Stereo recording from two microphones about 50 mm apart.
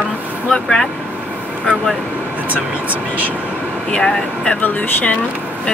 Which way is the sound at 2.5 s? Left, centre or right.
Right.